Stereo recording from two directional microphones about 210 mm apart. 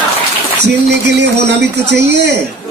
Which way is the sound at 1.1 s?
55° right (ahead or behind).